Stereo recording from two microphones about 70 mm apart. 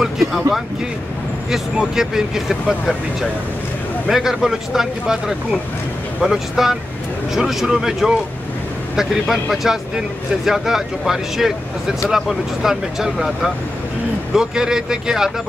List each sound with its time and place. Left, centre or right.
0.0 s vehicle: centre
1.5 s speech: centre
4.1 s speech: centre